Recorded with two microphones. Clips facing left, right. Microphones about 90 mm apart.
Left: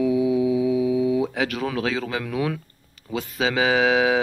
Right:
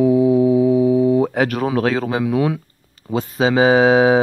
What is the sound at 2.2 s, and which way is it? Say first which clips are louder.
Speech: right 7 dB; 25° right (ahead or behind).